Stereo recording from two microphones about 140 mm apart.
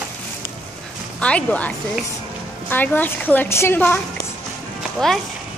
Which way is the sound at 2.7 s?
15° left (ahead or behind).